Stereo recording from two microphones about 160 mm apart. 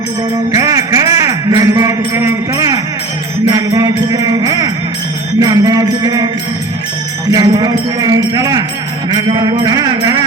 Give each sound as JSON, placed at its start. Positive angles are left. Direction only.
{"t": 0.5, "sound": "music", "side_deg": -20}
{"t": 7.3, "sound": "music", "side_deg": -25}